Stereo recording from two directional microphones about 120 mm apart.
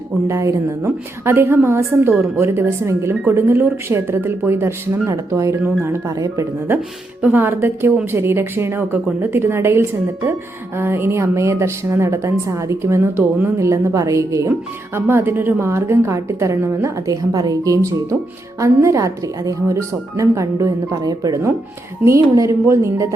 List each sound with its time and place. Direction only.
0.3 s a woman's voice: 25° right (ahead or behind)